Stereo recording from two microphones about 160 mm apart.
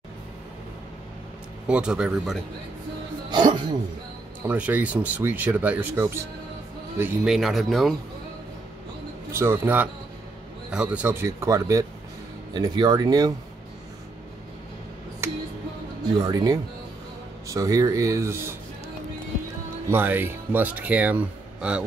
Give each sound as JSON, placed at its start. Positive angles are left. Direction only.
{"t": 1.7, "sound": "speech", "side_deg": -5}
{"t": 3.3, "sound": "music", "side_deg": -30}
{"t": 4.5, "sound": "speech", "side_deg": -10}
{"t": 7.3, "sound": "speech", "side_deg": 0}
{"t": 9.3, "sound": "speech", "side_deg": -15}
{"t": 15.2, "sound": "music", "side_deg": -15}
{"t": 16.2, "sound": "speech", "side_deg": -25}
{"t": 19.9, "sound": "speech", "side_deg": -10}